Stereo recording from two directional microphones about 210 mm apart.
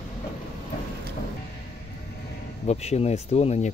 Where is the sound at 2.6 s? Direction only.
30° left (ahead or behind).